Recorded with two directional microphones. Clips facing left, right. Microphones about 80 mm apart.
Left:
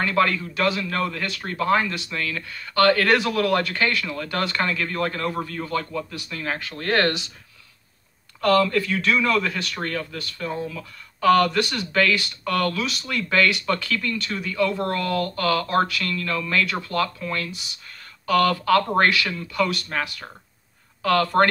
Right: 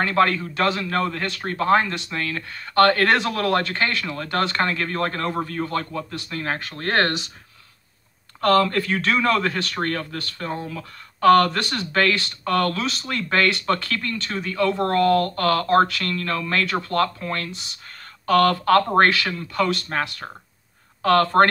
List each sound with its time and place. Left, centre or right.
0.0 s speech: right
8.4 s speech: right